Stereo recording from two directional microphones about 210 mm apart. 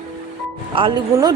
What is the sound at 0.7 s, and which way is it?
Speech, 20° right (ahead or behind).